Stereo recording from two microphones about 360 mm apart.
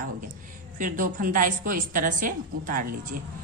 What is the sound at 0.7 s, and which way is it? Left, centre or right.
A woman's voice, right.